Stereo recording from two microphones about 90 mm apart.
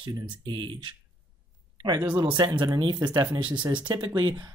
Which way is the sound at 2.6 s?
55° right (ahead or behind).